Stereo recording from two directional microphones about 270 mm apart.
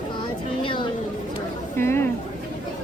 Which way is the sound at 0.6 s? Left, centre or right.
Centre.